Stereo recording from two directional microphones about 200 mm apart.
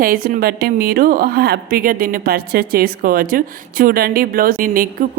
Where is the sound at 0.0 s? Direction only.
45° right (ahead or behind).